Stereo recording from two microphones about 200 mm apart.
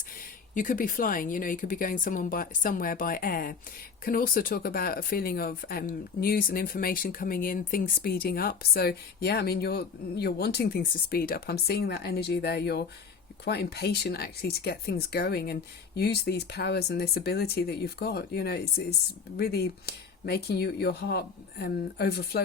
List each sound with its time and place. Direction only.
0.5 s speech: 40° left (ahead or behind)